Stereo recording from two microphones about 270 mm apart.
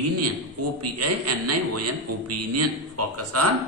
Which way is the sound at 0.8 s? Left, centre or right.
Right.